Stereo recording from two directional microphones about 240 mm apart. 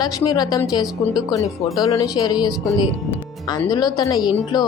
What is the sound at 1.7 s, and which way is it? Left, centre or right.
Speech, centre.